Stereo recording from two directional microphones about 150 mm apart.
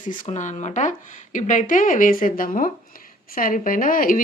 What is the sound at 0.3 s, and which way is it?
Speech, 55° left (ahead or behind).